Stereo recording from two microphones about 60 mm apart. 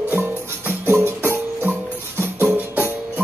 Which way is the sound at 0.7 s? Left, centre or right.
Right.